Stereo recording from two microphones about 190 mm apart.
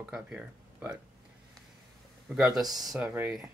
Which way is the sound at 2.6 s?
20° right (ahead or behind).